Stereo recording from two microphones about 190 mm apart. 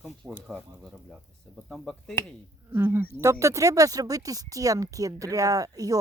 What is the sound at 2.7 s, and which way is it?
Speech, 10° right (ahead or behind).